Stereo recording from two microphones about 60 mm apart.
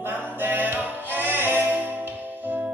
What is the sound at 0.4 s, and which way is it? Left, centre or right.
Music, right.